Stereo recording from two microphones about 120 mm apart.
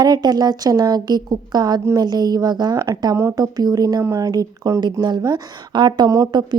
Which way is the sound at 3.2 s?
20° right (ahead or behind).